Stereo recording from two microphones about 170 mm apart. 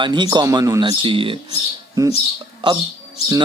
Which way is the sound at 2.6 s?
30° right (ahead or behind).